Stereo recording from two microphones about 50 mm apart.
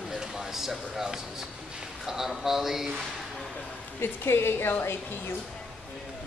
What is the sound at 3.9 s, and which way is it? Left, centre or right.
A woman's voice, left.